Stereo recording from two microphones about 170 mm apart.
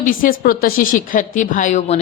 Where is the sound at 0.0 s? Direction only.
55° left (ahead or behind).